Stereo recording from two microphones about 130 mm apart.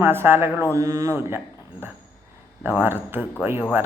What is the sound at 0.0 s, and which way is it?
Speech, 15° right (ahead or behind).